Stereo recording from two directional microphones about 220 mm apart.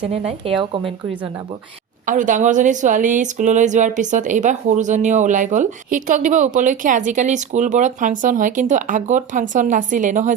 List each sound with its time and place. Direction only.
0.0 s speech: 25° right (ahead or behind)
2.0 s a woman's voice: 35° right (ahead or behind)